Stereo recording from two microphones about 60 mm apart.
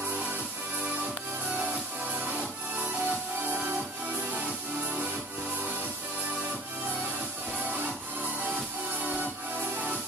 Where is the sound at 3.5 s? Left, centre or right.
Right.